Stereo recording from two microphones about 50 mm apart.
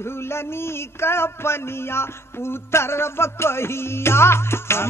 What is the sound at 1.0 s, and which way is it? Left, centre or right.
Music, left.